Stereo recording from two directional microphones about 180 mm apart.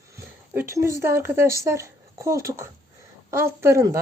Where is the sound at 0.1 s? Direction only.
15° right (ahead or behind).